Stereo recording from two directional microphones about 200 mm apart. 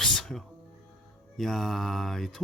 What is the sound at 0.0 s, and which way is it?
Music, centre (ahead or behind).